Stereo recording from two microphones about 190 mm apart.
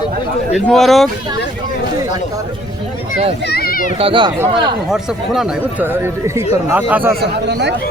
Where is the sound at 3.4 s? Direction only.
55° left (ahead or behind).